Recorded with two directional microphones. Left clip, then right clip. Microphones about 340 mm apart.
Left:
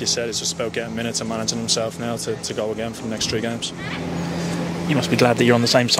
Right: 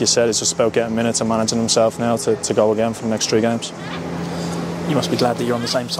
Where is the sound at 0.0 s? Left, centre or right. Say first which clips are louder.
Right 6 dB; right.